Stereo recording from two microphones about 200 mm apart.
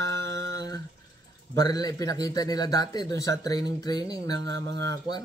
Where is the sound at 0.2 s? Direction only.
65° right (ahead or behind).